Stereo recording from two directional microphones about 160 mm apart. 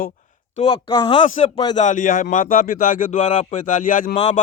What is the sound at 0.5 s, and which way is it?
Speech, 35° left (ahead or behind).